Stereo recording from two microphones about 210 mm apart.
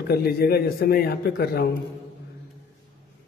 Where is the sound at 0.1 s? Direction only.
45° left (ahead or behind).